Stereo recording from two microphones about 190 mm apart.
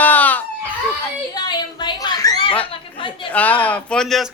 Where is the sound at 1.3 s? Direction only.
20° left (ahead or behind).